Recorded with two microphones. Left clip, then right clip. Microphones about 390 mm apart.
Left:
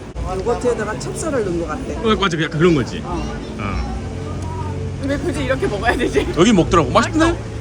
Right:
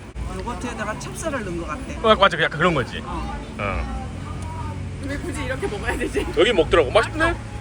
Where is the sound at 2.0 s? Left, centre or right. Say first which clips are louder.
Right 3 dB; centre.